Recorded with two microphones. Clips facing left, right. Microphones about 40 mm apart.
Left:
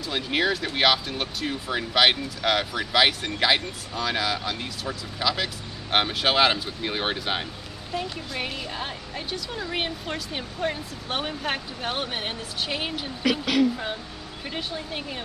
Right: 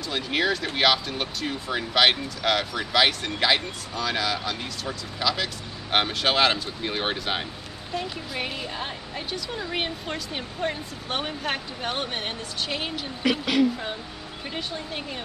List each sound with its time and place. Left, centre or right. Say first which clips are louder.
0.1 s speech: even; centre
13.2 s speech: even; centre